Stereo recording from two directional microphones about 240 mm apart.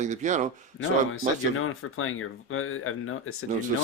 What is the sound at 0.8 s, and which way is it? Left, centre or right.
Speech, left.